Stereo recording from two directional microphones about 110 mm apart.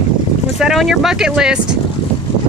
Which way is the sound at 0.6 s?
Centre (ahead or behind).